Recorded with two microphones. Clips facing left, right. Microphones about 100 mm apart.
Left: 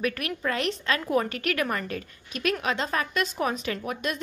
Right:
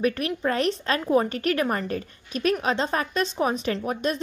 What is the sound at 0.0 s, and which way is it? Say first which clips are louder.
A woman's voice: right 4 dB; 30° right (ahead or behind).